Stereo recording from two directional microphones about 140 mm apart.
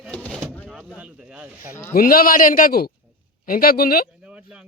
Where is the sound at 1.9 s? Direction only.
90° left.